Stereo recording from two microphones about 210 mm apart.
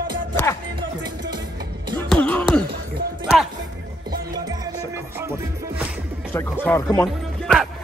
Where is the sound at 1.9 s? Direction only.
5° left (ahead or behind).